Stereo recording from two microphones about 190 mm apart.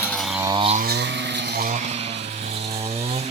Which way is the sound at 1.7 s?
35° right (ahead or behind).